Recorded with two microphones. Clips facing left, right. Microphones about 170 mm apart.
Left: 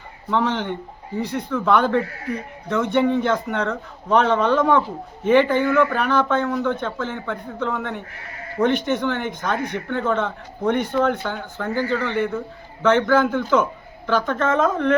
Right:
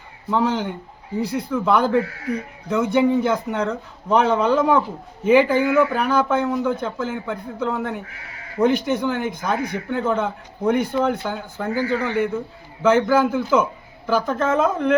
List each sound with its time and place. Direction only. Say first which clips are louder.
0.3 s speech: right 1 dB; 10° right (ahead or behind)